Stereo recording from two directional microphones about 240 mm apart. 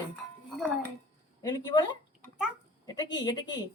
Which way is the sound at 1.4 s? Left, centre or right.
Centre.